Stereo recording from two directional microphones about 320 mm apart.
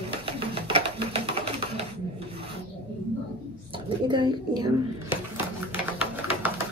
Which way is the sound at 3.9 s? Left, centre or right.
Centre.